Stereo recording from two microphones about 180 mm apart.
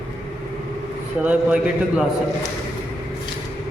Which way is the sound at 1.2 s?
5° right (ahead or behind).